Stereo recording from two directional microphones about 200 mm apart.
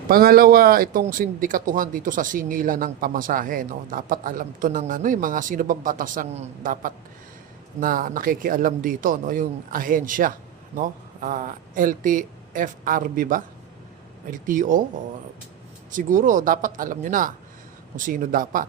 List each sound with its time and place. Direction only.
0.1 s speech: 50° right (ahead or behind)
15.9 s speech: 40° right (ahead or behind)